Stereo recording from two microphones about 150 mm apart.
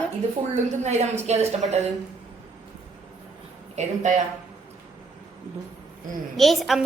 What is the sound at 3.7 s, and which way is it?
Speech, 50° right (ahead or behind).